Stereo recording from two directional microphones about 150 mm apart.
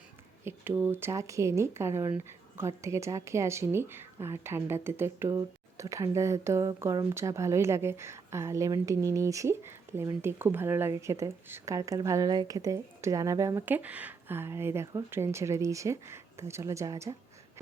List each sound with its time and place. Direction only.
0.4 s speech: 15° right (ahead or behind)